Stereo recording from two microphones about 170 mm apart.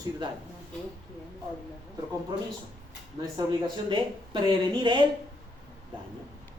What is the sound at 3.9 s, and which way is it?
Speech, 25° right (ahead or behind).